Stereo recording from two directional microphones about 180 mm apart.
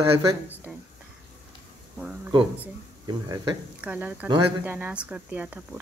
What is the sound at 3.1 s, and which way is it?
Speech, 25° right (ahead or behind).